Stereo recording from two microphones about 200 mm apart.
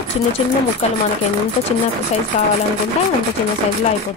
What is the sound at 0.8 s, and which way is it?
Speech, 30° left (ahead or behind).